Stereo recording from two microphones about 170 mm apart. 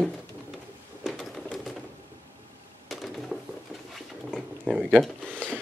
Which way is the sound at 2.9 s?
Centre (ahead or behind).